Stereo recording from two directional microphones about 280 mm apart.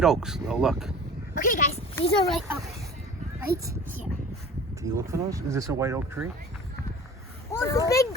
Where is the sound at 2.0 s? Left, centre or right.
Centre.